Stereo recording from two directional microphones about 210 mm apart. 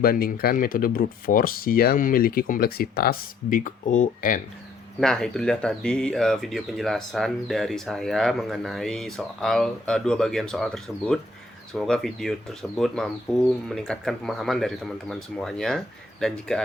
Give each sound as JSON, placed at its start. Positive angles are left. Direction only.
{"t": 0.0, "sound": "speech", "side_deg": 45}
{"t": 4.9, "sound": "speech", "side_deg": 5}